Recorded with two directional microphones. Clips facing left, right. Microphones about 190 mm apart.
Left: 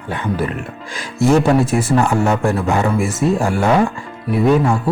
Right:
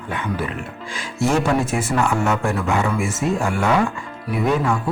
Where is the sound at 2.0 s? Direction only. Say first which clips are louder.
Left 2 dB; 35° left (ahead or behind).